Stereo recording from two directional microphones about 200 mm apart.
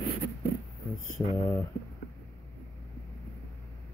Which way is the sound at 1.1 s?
15° left (ahead or behind).